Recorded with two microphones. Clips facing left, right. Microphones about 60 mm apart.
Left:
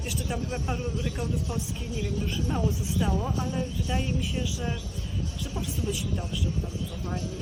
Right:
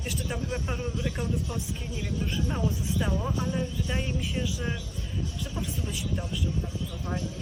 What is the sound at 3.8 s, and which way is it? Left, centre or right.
Speech, right.